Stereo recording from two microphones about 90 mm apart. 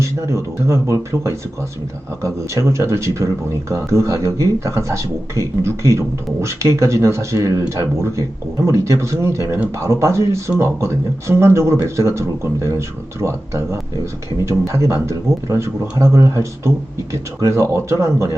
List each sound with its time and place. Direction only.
0.0 s a man's voice: 35° right (ahead or behind)